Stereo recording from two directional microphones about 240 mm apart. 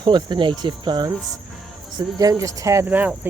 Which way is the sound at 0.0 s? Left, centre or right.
Centre.